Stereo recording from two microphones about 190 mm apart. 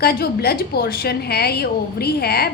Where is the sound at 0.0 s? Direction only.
55° left (ahead or behind).